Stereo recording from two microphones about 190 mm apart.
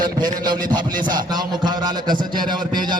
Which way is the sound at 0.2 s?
20° right (ahead or behind).